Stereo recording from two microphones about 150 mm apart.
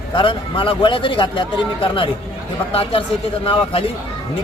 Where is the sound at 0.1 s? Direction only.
35° left (ahead or behind).